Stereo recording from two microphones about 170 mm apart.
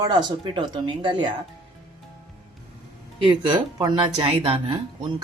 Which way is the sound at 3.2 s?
25° right (ahead or behind).